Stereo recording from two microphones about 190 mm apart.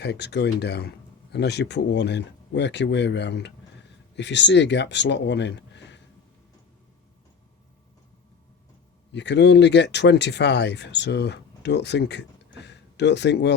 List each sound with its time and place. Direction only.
0.0 s speech: 60° left (ahead or behind)
9.1 s speech: 65° left (ahead or behind)